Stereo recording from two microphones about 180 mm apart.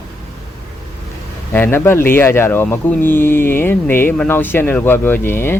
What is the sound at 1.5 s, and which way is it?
Speech, 10° left (ahead or behind).